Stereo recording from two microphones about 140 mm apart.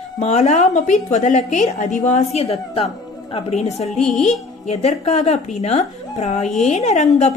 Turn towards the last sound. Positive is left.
turn(degrees=55)  # may be behind; listen again after turning